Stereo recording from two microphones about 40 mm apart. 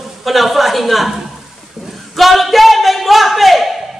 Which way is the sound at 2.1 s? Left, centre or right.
Centre.